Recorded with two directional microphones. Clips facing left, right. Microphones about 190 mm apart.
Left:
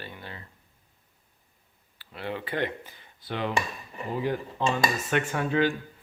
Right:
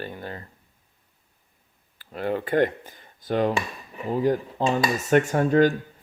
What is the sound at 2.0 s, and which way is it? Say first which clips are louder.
Speech: right 7 dB; 45° right (ahead or behind).